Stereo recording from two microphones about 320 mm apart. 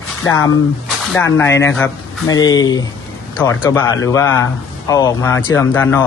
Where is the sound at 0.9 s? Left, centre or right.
Centre.